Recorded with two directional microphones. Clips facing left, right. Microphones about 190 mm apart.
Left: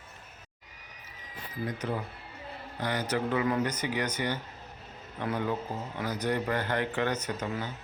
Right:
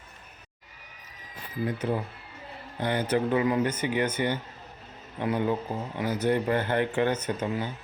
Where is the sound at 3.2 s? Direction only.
20° right (ahead or behind).